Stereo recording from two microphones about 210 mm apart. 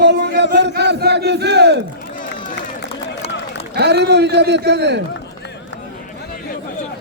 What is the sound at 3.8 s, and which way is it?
Battle cry, 50° right (ahead or behind).